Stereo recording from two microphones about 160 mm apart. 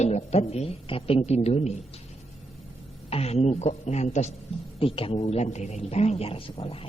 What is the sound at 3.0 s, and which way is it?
A woman's voice, 40° left (ahead or behind).